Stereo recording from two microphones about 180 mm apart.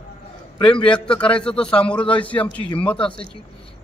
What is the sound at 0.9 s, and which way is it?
A man's voice, 5° left (ahead or behind).